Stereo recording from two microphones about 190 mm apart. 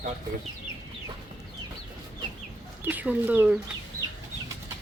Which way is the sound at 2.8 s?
10° right (ahead or behind).